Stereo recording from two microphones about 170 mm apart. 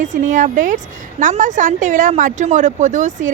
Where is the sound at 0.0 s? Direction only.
45° right (ahead or behind).